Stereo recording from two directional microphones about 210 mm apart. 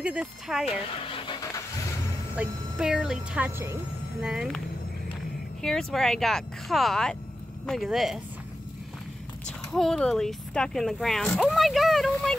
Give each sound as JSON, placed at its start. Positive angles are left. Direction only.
{"t": 0.0, "sound": "speech", "side_deg": -5}
{"t": 1.0, "sound": "vehicle", "side_deg": 25}
{"t": 2.3, "sound": "speech", "side_deg": -5}
{"t": 5.6, "sound": "speech", "side_deg": 5}
{"t": 9.7, "sound": "speech", "side_deg": 0}